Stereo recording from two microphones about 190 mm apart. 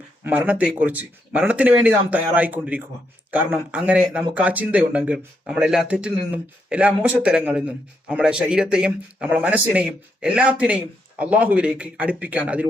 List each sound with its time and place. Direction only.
0.3 s speech: 5° right (ahead or behind)